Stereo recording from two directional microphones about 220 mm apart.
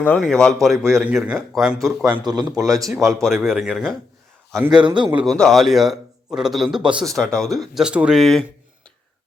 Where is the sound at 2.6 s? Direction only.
15° right (ahead or behind).